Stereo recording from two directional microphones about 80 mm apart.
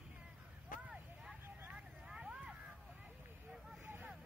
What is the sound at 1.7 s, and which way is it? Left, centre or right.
Vehicle, centre.